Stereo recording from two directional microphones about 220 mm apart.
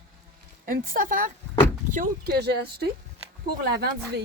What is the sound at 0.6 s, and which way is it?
A woman's voice, 40° right (ahead or behind).